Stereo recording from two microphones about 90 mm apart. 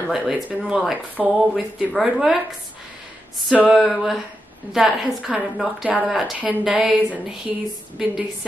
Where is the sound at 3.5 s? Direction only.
5° right (ahead or behind).